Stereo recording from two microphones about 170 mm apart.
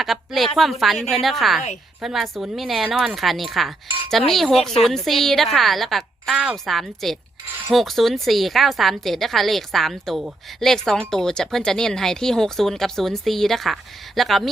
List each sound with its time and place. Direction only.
0.0 s a woman's voice: centre (ahead or behind)